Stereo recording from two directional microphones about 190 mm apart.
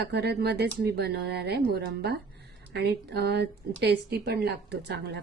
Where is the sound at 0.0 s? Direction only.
60° right (ahead or behind).